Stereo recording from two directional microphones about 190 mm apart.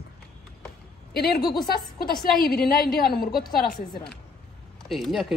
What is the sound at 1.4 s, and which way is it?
Speech, 20° left (ahead or behind).